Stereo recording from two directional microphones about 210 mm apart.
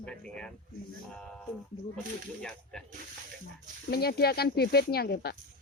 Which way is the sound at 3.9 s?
50° left (ahead or behind).